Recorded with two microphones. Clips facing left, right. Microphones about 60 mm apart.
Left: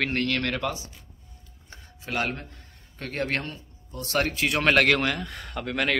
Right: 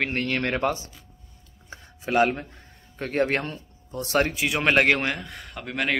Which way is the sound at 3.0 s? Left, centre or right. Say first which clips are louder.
Right 5 dB; right.